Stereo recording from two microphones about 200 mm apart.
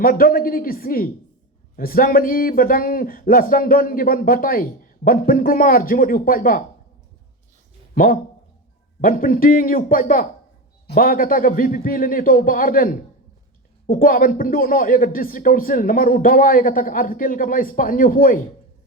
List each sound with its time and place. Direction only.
0.0 s a man's voice: 45° left (ahead or behind)
7.9 s a man's voice: 45° left (ahead or behind)